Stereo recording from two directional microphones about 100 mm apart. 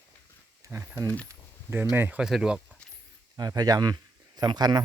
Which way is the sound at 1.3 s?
30° right (ahead or behind).